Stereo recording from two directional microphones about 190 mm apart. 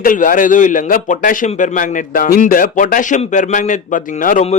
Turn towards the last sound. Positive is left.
turn(degrees=40)  # may be behind; listen again after turning